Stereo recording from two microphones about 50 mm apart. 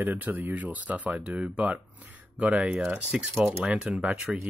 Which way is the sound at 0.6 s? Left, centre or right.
Right.